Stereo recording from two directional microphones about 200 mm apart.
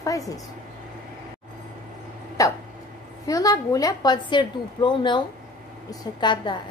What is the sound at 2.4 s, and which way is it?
Hiccup, 15° left (ahead or behind).